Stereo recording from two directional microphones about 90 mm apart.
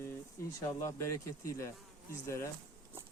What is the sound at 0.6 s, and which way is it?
Speech, 35° left (ahead or behind).